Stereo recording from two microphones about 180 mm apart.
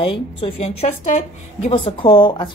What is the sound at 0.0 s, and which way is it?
A woman's voice, 30° left (ahead or behind).